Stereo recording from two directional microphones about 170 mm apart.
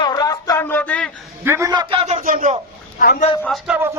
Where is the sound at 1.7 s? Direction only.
30° right (ahead or behind).